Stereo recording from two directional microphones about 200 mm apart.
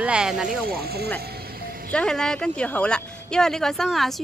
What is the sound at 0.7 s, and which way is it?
Speech, 50° right (ahead or behind).